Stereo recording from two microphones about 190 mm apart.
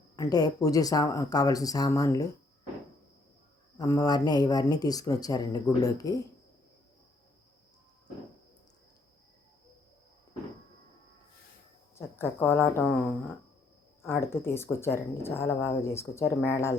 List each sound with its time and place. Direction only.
0.2 s speech: 20° left (ahead or behind)
3.8 s speech: 20° left (ahead or behind)
11.9 s speech: 15° left (ahead or behind)